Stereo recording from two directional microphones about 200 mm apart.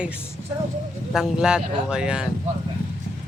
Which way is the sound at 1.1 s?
5° right (ahead or behind).